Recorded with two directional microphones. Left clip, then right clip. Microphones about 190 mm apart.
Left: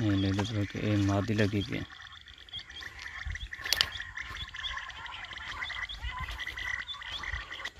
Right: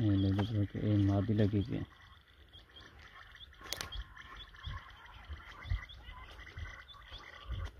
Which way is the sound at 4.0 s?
60° right (ahead or behind).